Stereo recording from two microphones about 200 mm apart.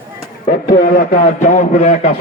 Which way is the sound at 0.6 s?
50° left (ahead or behind).